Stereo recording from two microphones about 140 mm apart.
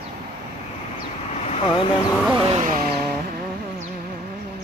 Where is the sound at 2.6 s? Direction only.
85° right.